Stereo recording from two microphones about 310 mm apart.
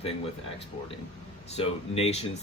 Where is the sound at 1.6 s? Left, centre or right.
Centre.